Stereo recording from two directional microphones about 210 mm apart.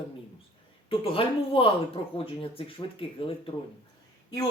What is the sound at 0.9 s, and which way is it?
Speech, 25° left (ahead or behind).